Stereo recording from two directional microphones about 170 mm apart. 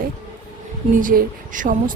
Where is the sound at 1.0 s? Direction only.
55° right (ahead or behind).